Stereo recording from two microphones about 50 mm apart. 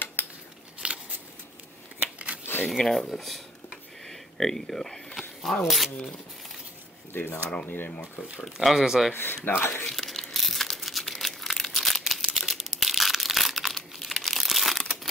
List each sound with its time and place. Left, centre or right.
0.0 s scissors: left
0.8 s a sound: right
2.1 s a sound: right
2.8 s speech: centre
5.1 s a sound: centre
7.1 s speech: left
8.4 s speech: centre
9.1 s speech: left
9.8 s crumpling: centre